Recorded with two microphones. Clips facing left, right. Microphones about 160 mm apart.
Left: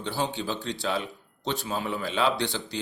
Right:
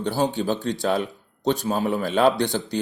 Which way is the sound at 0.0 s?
45° right (ahead or behind).